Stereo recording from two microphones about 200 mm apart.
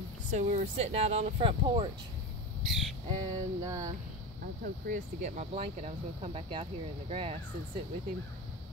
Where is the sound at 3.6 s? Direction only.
15° right (ahead or behind).